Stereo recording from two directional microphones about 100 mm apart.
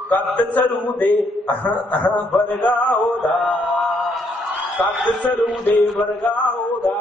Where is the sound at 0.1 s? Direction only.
15° left (ahead or behind).